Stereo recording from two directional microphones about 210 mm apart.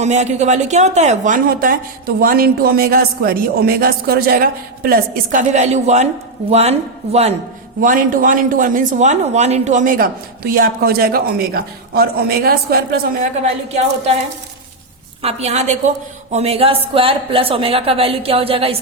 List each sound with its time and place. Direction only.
0.0 s a woman's voice: 35° right (ahead or behind)
7.8 s a woman's voice: 40° right (ahead or behind)
13.4 s a woman's voice: 30° right (ahead or behind)
15.2 s a woman's voice: 30° right (ahead or behind)